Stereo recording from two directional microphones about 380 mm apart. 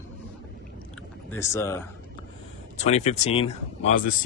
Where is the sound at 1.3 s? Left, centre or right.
Centre.